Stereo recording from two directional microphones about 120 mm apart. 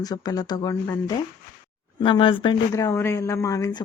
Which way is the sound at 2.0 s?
45° left (ahead or behind).